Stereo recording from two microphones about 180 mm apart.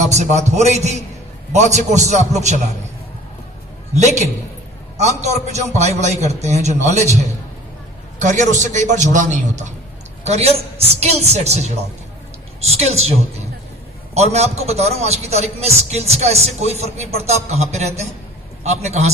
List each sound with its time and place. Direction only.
0.1 s a man's voice: 40° right (ahead or behind)
3.9 s a man's voice: 40° right (ahead or behind)
8.2 s a man's voice: 45° right (ahead or behind)
12.7 s a man's voice: 35° right (ahead or behind)